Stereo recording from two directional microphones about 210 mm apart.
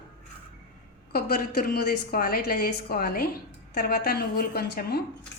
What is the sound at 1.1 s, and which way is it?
A woman's voice, 45° left (ahead or behind).